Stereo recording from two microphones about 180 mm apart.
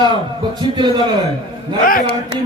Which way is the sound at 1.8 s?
50° left (ahead or behind).